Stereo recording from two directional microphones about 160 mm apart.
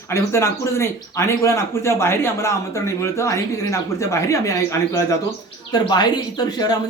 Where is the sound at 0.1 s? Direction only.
15° left (ahead or behind).